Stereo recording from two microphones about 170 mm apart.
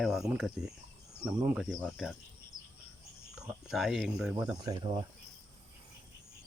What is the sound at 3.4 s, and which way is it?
Speech, 5° right (ahead or behind).